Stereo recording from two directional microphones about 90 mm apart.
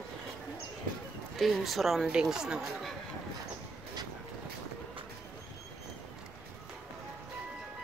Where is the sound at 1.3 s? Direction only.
Centre (ahead or behind).